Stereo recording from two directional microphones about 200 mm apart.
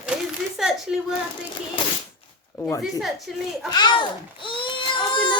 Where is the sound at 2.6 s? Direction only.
15° left (ahead or behind).